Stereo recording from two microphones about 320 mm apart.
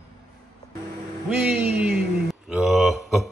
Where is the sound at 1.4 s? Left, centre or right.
Centre.